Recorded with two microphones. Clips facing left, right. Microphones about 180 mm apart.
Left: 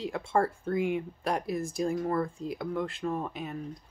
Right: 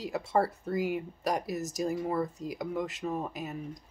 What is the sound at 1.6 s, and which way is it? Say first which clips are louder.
Speech: left 2 dB; 90° right.